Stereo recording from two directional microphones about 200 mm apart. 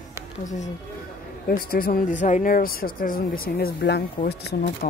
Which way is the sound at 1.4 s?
45° left (ahead or behind).